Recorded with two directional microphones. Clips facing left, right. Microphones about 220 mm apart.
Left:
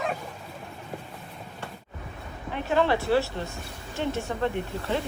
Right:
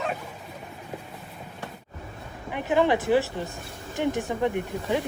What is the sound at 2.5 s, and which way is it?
Speech, 15° right (ahead or behind).